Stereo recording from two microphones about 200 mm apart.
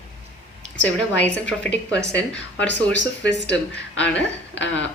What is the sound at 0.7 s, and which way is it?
Speech, 65° left (ahead or behind).